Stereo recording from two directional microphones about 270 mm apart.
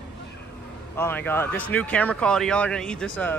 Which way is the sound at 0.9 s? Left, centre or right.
Centre.